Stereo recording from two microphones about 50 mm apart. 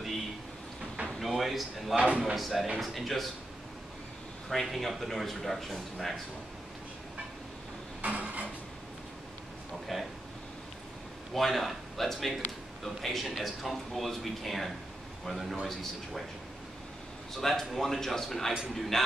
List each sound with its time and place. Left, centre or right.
1.2 s speech: centre
2.0 s speech: right
2.3 s speech: centre
4.5 s speech: centre
8.0 s a sound: right
9.9 s speech: centre
11.3 s speech: centre
17.4 s speech: centre